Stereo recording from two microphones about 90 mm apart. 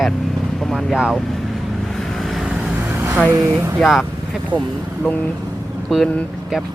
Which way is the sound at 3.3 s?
35° right (ahead or behind).